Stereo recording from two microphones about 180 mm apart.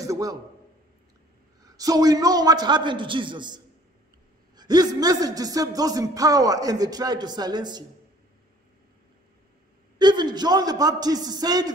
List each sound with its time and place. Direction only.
0.0 s a sound: 20° right (ahead or behind)
1.6 s speech: 20° right (ahead or behind)
9.9 s speech: 25° right (ahead or behind)